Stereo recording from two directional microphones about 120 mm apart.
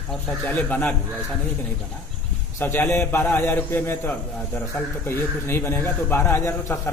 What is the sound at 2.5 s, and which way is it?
A man's voice, 20° left (ahead or behind).